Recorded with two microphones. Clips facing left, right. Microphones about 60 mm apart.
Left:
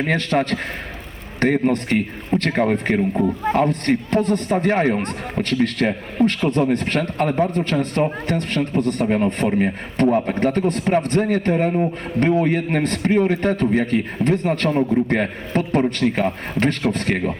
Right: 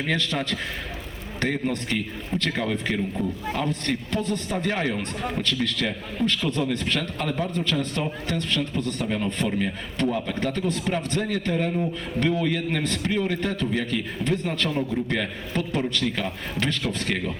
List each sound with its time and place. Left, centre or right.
0.0 s a man's voice: left